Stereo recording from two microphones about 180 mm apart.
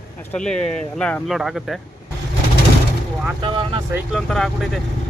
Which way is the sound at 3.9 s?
Centre (ahead or behind).